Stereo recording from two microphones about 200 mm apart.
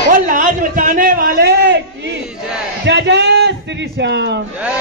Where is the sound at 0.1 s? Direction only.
45° right (ahead or behind).